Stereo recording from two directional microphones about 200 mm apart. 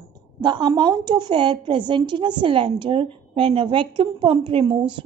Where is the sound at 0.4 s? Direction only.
20° right (ahead or behind).